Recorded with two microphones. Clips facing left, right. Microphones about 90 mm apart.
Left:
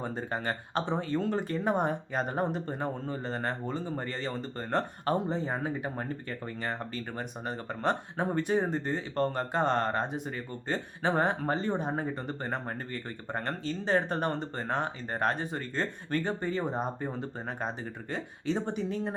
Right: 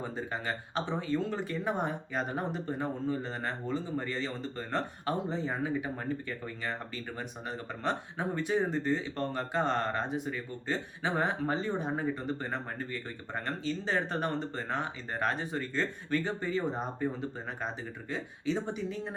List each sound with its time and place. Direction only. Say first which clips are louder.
0.0 s speech: left 2 dB; 45° left (ahead or behind)
18.1 s speech: left 1 dB; 55° left (ahead or behind)